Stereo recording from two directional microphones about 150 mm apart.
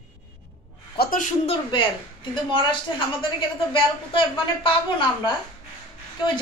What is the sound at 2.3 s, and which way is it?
A woman's voice, 35° left (ahead or behind).